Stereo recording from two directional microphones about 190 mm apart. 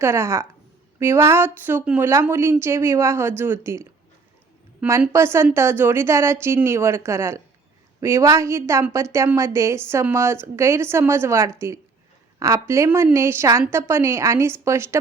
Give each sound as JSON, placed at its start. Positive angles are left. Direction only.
{"t": 0.0, "sound": "a woman's voice", "side_deg": -15}